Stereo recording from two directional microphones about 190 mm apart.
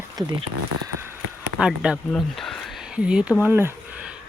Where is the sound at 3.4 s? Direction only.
10° right (ahead or behind).